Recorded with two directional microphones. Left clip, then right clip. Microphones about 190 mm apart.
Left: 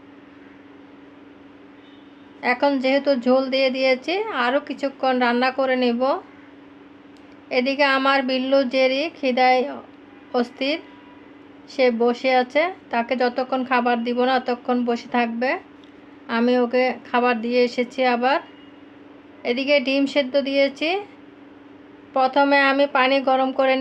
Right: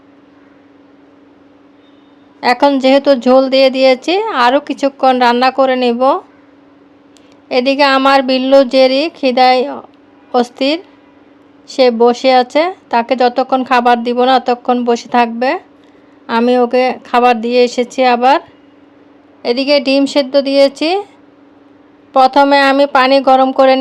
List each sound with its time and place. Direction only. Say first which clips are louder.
2.4 s speech: right 10 dB; 40° right (ahead or behind)
7.4 s speech: right 9 dB; 40° right (ahead or behind)
22.1 s speech: right 9 dB; 35° right (ahead or behind)